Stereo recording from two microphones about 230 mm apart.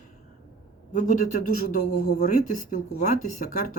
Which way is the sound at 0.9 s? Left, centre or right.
Left.